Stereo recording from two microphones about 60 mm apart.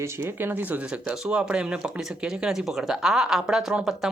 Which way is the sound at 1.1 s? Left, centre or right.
Centre.